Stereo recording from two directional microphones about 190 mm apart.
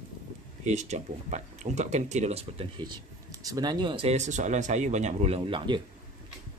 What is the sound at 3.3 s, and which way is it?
Speech, 20° right (ahead or behind).